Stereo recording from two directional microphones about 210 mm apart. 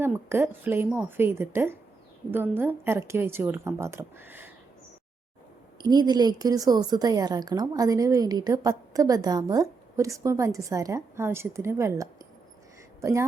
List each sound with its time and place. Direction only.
0.0 s a woman's voice: 10° right (ahead or behind)
5.8 s a woman's voice: 20° right (ahead or behind)